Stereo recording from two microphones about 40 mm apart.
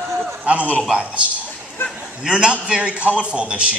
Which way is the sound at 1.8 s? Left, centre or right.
Left.